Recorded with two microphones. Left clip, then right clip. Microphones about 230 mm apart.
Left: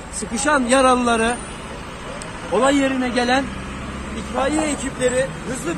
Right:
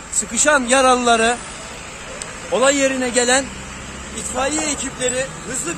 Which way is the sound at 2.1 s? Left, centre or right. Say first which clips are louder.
Right 1 dB; right.